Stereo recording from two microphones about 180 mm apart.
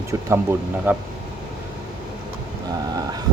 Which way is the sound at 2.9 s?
20° right (ahead or behind).